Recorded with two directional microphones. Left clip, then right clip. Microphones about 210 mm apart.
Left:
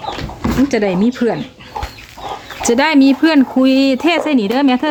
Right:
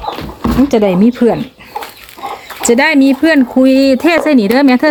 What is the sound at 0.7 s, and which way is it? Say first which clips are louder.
Speech: right 5 dB; 10° right (ahead or behind).